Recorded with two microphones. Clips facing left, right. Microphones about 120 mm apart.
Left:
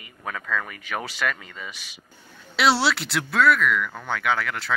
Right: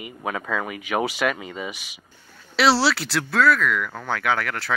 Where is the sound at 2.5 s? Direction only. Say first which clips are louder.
Right 2 dB; centre (ahead or behind).